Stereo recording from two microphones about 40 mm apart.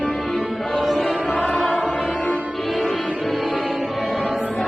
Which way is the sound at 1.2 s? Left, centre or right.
Centre.